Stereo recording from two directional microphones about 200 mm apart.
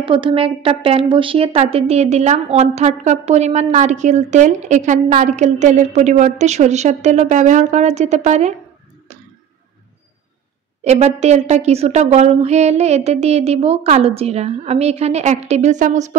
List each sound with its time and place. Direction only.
0.0 s a woman's voice: 25° right (ahead or behind)
10.8 s a woman's voice: 35° right (ahead or behind)